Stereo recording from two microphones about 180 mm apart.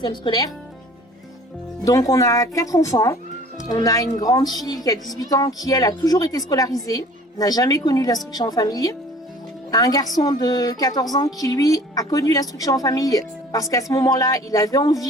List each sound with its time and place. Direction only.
0.0 s speech: 25° left (ahead or behind)
1.8 s speech: 20° left (ahead or behind)